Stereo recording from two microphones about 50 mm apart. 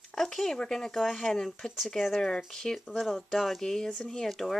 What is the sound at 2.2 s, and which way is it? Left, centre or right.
Speech, centre.